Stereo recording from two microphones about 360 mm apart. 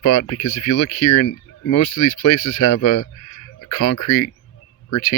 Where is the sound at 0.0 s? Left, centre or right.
Left.